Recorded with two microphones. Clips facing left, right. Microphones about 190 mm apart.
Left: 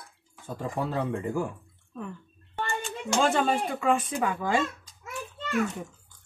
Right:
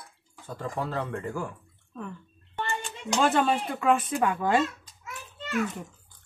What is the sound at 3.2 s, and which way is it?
Speech, 5° right (ahead or behind).